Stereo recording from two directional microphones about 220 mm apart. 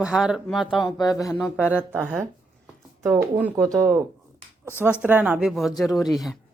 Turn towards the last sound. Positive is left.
turn(degrees=0)  # may be behind; listen again after turning